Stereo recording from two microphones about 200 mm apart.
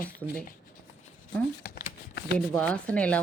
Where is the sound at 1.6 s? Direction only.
50° left (ahead or behind).